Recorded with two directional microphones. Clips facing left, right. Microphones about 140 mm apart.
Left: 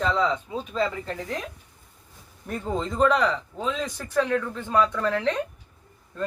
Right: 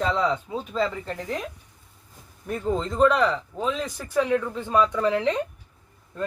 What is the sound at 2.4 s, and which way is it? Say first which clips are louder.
Speech: right 2 dB; centre (ahead or behind).